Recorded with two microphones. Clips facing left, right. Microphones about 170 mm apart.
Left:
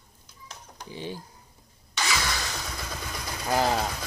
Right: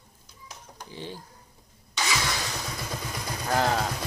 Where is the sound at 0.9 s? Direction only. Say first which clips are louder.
Left 3 dB; 15° left (ahead or behind).